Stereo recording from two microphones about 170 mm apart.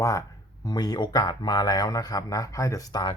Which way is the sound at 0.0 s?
20° left (ahead or behind).